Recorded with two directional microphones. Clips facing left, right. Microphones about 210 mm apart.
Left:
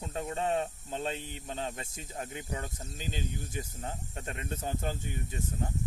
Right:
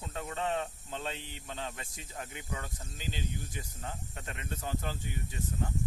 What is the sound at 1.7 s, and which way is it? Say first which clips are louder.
Speech: left 4 dB; 40° left (ahead or behind).